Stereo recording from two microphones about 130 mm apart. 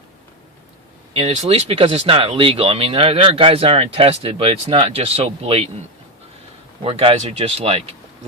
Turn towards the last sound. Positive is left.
turn(degrees=-50)  # may be behind; listen again after turning